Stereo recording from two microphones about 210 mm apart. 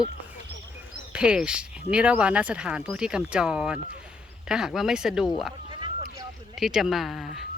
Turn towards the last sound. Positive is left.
turn(degrees=0)  # may be behind; listen again after turning